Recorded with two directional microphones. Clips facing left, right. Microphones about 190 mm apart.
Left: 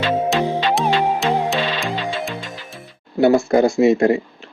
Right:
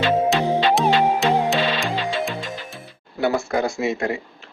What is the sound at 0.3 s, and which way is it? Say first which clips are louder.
Music: even; centre (ahead or behind).